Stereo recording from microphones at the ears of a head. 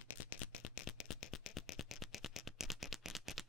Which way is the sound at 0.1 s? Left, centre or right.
Left.